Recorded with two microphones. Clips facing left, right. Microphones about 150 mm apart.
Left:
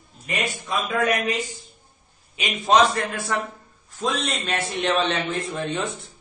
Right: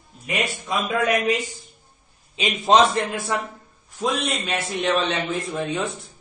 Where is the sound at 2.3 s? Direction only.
25° right (ahead or behind).